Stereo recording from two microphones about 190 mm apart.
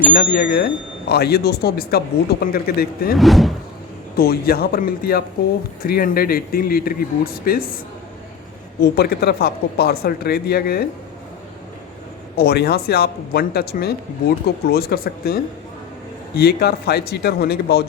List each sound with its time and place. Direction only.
0.1 s speech: 50° left (ahead or behind)
3.2 s speech: centre (ahead or behind)
4.2 s speech: 55° left (ahead or behind)
8.8 s speech: 55° left (ahead or behind)
12.4 s speech: 60° left (ahead or behind)